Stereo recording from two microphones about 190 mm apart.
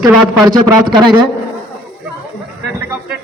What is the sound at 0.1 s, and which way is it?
Speech, 5° right (ahead or behind).